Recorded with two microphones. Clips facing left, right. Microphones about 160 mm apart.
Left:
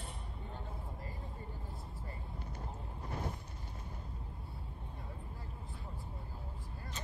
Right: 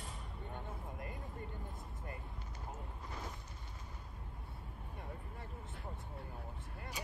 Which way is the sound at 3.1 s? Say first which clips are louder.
Left 7 dB; 30° left (ahead or behind).